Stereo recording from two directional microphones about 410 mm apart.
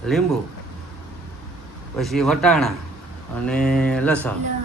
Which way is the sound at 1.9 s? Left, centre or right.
Centre.